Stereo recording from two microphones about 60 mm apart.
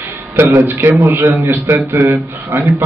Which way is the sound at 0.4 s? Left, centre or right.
Right.